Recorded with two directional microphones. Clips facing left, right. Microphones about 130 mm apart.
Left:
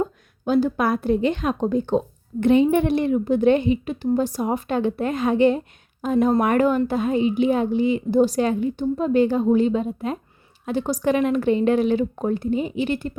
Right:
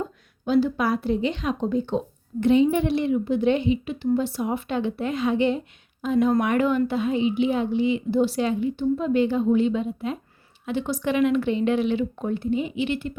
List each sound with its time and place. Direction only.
0.0 s a woman's voice: 45° left (ahead or behind)